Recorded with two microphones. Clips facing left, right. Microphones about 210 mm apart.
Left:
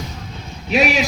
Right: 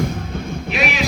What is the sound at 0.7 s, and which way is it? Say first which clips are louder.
Speech: left 5 dB; 40° left (ahead or behind).